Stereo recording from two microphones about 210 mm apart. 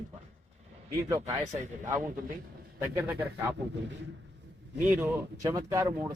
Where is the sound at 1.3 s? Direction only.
35° right (ahead or behind).